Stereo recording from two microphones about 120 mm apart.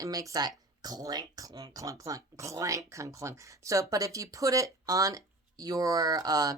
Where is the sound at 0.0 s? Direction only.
30° right (ahead or behind).